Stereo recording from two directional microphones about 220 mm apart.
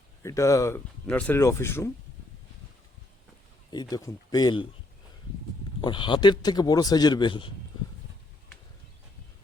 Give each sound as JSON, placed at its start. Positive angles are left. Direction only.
{"t": 0.2, "sound": "speech", "side_deg": 15}
{"t": 3.7, "sound": "speech", "side_deg": 20}
{"t": 5.8, "sound": "a man's voice", "side_deg": 20}